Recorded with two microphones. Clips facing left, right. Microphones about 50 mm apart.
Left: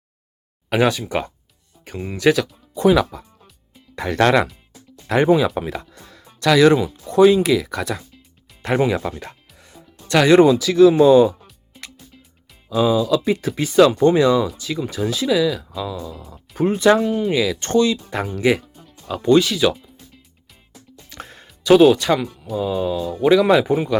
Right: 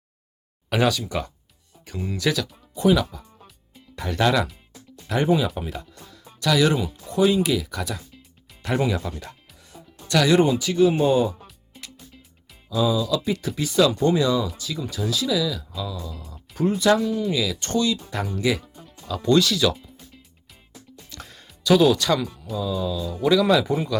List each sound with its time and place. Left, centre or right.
0.7 s speech: left
6.1 s speech: left
9.6 s music: left
10.5 s speech: left
12.7 s speech: left
16.1 s speech: left
16.6 s speech: left
17.6 s speech: left
21.1 s music: left
21.6 s speech: left
21.9 s speech: left
22.5 s speech: left